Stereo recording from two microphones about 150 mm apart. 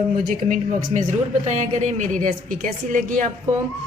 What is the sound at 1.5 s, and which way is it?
A woman's voice, 50° right (ahead or behind).